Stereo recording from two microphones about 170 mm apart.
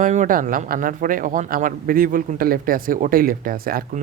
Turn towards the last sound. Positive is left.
turn(degrees=-55)  # may be behind; listen again after turning